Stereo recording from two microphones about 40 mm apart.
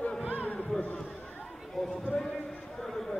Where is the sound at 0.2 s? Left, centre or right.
Right.